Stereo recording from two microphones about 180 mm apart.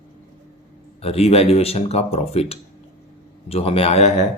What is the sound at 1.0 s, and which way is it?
Speech, 35° left (ahead or behind).